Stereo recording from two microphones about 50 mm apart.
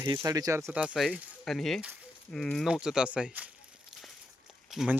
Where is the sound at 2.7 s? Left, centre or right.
Centre.